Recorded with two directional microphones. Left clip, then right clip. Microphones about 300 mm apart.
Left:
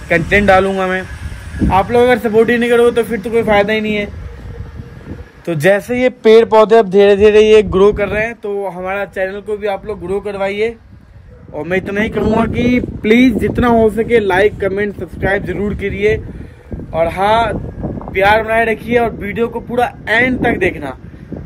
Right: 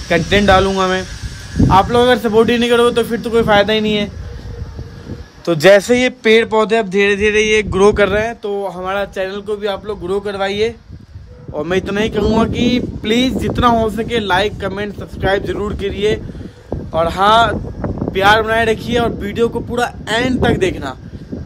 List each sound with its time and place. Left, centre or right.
0.1 s speech: centre
5.4 s a man's voice: centre
5.9 s a sound: centre
7.9 s speech: right